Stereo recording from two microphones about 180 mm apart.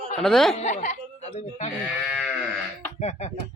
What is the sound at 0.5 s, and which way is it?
Speech, 40° left (ahead or behind).